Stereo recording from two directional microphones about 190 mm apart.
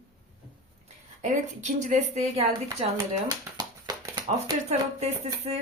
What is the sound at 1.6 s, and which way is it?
A woman's voice, 40° right (ahead or behind).